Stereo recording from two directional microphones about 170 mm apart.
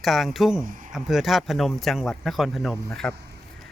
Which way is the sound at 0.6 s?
50° right (ahead or behind).